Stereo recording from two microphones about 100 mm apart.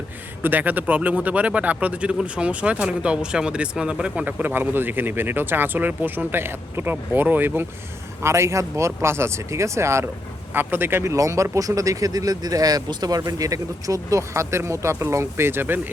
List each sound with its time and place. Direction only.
0.4 s speech: 15° right (ahead or behind)